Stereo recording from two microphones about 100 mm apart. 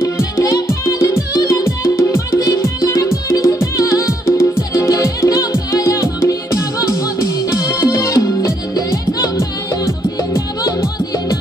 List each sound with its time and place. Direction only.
0.0 s music: 30° left (ahead or behind)
10.3 s music: 30° left (ahead or behind)